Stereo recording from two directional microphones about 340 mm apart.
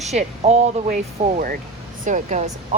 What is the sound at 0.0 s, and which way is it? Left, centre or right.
Speech, centre.